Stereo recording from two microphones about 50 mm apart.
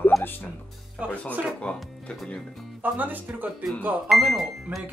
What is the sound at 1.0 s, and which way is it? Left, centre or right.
Speech, right.